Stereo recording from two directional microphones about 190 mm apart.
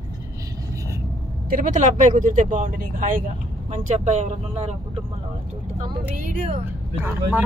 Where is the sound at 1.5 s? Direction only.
45° right (ahead or behind).